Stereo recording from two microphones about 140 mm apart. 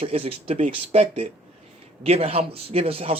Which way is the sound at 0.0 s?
45° right (ahead or behind).